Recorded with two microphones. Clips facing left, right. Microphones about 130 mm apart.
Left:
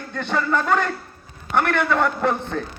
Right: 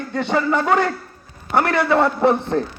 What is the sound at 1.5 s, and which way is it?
Speech, 35° right (ahead or behind).